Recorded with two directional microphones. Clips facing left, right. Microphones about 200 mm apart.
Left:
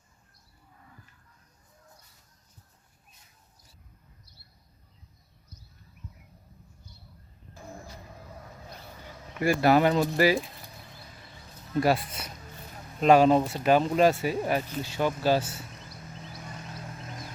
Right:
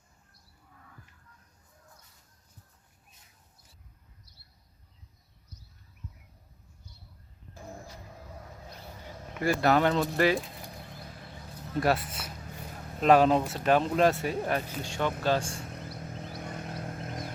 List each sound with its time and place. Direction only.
9.4 s speech: 10° left (ahead or behind)
11.8 s speech: centre (ahead or behind)
15.7 s a sound: 60° right (ahead or behind)